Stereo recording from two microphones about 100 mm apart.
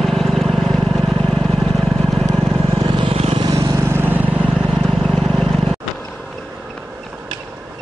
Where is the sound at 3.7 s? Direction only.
25° right (ahead or behind).